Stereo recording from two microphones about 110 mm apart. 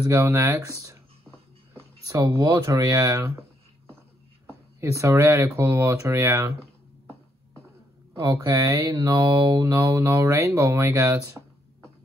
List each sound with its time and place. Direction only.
0.1 s speech: 25° right (ahead or behind)
4.5 s speech: 25° right (ahead or behind)
8.3 s speech: 20° right (ahead or behind)
8.9 s speech: 35° right (ahead or behind)